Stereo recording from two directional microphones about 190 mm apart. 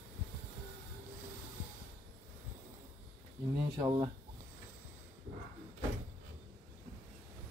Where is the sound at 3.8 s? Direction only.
20° right (ahead or behind).